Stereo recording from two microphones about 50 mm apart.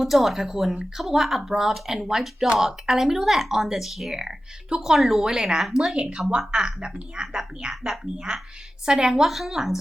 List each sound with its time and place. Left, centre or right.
0.0 s speech: centre
6.0 s speech: centre